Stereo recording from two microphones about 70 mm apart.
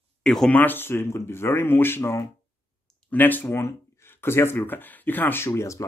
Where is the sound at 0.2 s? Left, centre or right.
Centre.